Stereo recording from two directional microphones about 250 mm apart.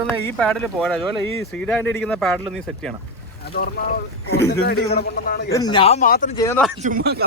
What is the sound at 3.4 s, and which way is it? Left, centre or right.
A man's voice, left.